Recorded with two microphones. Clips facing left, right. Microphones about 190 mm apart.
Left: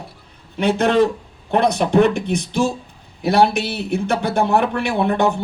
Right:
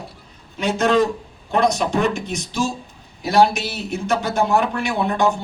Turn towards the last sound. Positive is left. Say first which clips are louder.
# left 2 dB
turn(degrees=60)  # may be behind; listen again after turning